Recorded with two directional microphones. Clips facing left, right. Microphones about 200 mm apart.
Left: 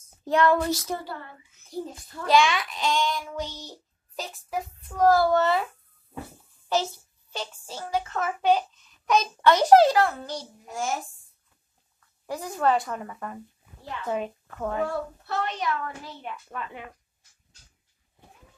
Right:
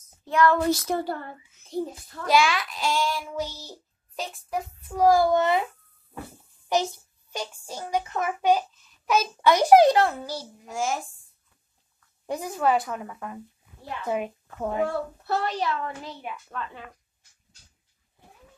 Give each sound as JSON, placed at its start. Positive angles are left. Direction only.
{"t": 0.2, "sound": "child singing", "side_deg": 35}
{"t": 0.7, "sound": "a sound", "side_deg": -55}
{"t": 1.7, "sound": "a child's voice", "side_deg": -20}
{"t": 2.2, "sound": "a child's voice", "side_deg": -5}
{"t": 4.8, "sound": "a child's voice", "side_deg": -10}
{"t": 6.7, "sound": "a child's voice", "side_deg": -15}
{"t": 10.2, "sound": "a child's voice", "side_deg": -5}
{"t": 12.3, "sound": "a child's voice", "side_deg": -15}
{"t": 14.0, "sound": "a child's voice", "side_deg": -15}
{"t": 15.2, "sound": "a woman's voice", "side_deg": -35}
{"t": 16.3, "sound": "a child's voice", "side_deg": -5}